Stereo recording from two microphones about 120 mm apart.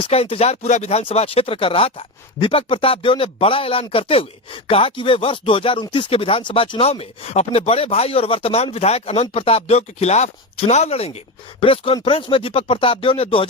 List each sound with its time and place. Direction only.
0.0 s speech: 55° left (ahead or behind)